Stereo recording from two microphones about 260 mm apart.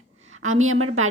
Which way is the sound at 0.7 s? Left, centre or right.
Right.